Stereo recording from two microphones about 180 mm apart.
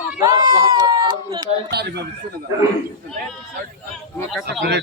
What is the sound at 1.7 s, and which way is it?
Speech, 65° right (ahead or behind).